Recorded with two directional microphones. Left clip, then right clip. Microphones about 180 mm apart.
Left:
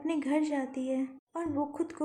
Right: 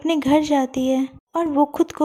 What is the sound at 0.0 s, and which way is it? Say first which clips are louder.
A woman's voice: right 12 dB; 45° right (ahead or behind).